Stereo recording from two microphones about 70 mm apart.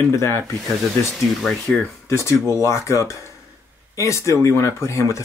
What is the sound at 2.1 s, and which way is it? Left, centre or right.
Speech, left.